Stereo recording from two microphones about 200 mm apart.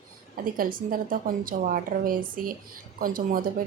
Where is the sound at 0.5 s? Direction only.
45° right (ahead or behind).